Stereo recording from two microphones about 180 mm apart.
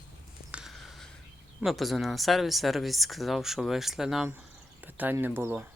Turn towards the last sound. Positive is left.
turn(degrees=-10)  # may be behind; listen again after turning